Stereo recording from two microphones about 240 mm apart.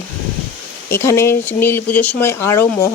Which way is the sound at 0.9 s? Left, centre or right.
Centre.